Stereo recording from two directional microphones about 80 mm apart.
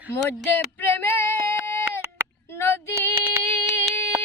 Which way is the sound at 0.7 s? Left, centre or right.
Left.